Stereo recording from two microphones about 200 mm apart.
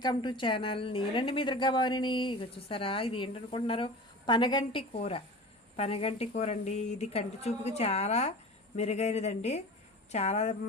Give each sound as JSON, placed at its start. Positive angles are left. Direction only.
{"t": 0.0, "sound": "a woman's voice", "side_deg": 20}